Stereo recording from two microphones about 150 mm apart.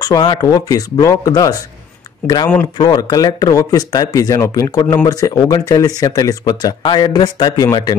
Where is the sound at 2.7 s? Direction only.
25° left (ahead or behind).